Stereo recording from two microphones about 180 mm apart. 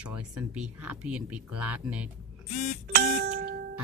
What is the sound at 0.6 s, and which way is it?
Speech, 10° right (ahead or behind).